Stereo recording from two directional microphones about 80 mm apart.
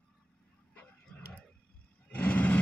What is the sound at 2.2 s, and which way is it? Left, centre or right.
Vehicle, left.